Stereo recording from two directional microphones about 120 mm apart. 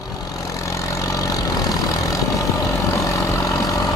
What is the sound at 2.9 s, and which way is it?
Vehicle, 25° left (ahead or behind).